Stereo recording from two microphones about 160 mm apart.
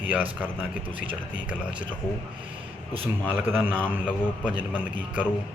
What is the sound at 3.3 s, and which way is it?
A man's voice, 10° right (ahead or behind).